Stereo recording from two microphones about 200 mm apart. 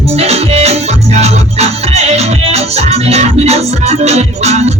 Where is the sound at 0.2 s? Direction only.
30° right (ahead or behind).